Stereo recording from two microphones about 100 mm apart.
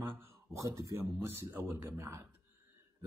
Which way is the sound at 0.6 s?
35° right (ahead or behind).